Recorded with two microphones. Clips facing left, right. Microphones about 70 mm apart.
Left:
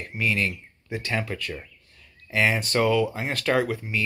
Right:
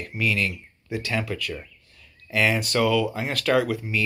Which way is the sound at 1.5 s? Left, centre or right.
Centre.